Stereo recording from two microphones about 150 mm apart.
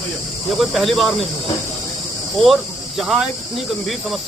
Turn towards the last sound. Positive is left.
turn(degrees=0)  # may be behind; listen again after turning